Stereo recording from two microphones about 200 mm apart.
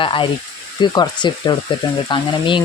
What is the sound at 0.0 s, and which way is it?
Speech, 25° left (ahead or behind).